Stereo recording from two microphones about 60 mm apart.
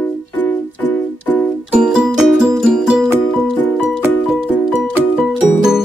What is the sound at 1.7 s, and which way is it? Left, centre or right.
Music, centre.